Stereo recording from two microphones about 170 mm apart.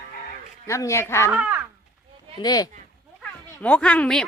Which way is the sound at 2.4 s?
20° left (ahead or behind).